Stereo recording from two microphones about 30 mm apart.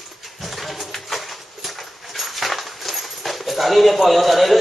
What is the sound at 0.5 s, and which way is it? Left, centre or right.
Music, centre.